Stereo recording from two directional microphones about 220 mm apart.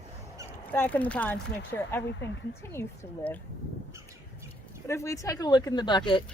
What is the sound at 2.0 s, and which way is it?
Speech, 55° left (ahead or behind).